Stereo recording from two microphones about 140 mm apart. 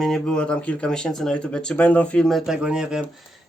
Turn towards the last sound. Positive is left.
turn(degrees=-5)  # may be behind; listen again after turning